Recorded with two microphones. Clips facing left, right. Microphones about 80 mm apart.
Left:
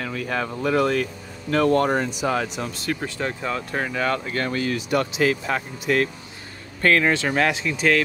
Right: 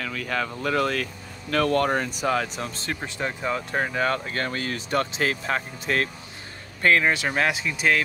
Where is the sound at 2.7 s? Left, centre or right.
Right.